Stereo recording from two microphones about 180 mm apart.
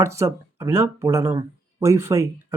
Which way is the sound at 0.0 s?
15° right (ahead or behind).